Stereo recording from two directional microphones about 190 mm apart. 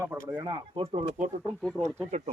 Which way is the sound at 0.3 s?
25° right (ahead or behind).